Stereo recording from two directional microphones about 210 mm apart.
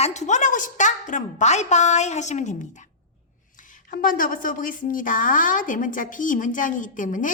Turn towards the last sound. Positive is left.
turn(degrees=40)  # may be behind; listen again after turning